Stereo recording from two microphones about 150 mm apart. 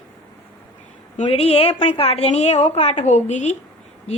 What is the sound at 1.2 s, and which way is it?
A woman's voice, 40° left (ahead or behind).